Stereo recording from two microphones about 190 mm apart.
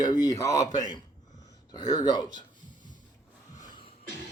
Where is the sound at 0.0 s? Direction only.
20° left (ahead or behind).